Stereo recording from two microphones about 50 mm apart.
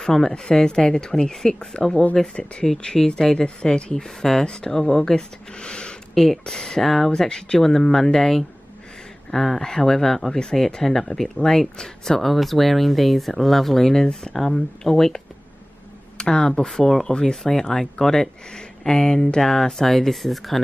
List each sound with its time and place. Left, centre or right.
0.0 s speech: centre
6.1 s speech: centre
16.2 s speech: centre